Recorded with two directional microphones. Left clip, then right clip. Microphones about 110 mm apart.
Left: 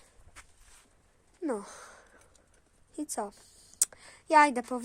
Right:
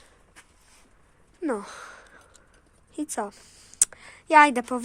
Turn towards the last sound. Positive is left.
turn(degrees=15)  # may be behind; listen again after turning